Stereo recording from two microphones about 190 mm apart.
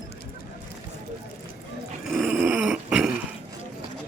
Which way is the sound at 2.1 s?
5° right (ahead or behind).